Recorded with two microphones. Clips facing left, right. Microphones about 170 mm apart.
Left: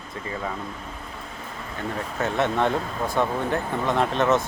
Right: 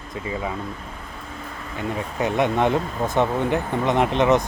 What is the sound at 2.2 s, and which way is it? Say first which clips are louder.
Speech: right 3 dB; 15° right (ahead or behind).